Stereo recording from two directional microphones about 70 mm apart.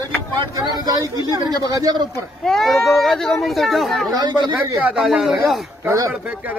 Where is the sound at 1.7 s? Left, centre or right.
Right.